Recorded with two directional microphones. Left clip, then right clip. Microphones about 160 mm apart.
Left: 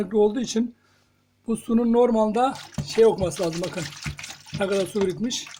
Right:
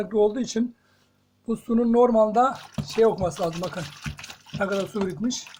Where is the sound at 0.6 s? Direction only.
35° left (ahead or behind).